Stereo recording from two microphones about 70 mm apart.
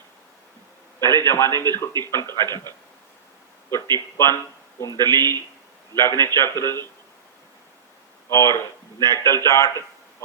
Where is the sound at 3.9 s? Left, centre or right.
Left.